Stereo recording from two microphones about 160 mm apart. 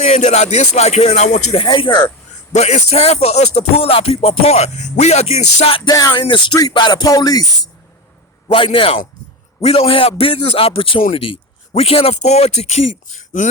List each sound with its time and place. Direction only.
0.0 s speech: 45° left (ahead or behind)
1.6 s music: 30° left (ahead or behind)
2.5 s speech: 45° left (ahead or behind)
5.9 s music: 25° left (ahead or behind)
8.4 s speech: 35° left (ahead or behind); by 13.5 s 50° left (ahead or behind)